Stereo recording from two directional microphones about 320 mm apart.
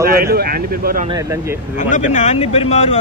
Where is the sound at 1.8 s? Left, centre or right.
Left.